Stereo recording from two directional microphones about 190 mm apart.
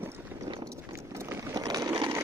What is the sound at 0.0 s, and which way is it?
Clip-clop, 10° right (ahead or behind).